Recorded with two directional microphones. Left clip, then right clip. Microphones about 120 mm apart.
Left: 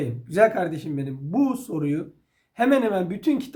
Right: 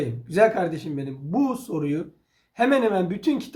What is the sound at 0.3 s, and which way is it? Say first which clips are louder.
Speech: even; 40° left (ahead or behind).